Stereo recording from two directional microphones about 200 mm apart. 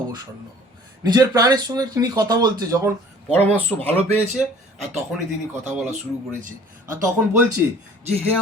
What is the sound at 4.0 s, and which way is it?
Speech, 30° right (ahead or behind).